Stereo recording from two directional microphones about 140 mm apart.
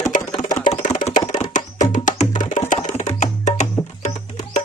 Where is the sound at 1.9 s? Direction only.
65° left (ahead or behind).